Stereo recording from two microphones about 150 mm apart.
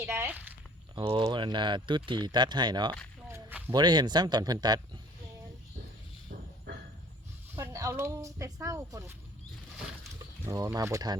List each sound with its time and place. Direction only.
0.0 s a sound: 15° right (ahead or behind)
0.9 s speech: 35° right (ahead or behind)
3.2 s speech: 20° right (ahead or behind)
7.5 s speech: 20° right (ahead or behind)
10.4 s speech: 20° right (ahead or behind)